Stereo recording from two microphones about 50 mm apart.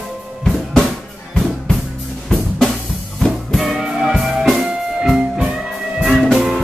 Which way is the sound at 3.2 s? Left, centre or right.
Centre.